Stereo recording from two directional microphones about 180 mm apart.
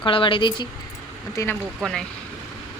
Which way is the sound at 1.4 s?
15° left (ahead or behind).